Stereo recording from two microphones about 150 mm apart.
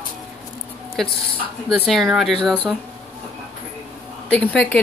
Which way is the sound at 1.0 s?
Centre (ahead or behind).